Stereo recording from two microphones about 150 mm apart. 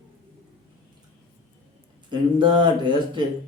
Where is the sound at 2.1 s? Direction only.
30° right (ahead or behind).